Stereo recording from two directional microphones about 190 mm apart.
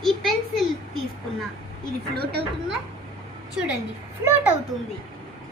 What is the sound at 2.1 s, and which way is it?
Speech, 55° right (ahead or behind).